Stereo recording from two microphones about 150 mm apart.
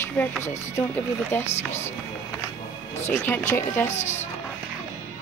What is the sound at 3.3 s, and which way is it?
Speech, 15° left (ahead or behind).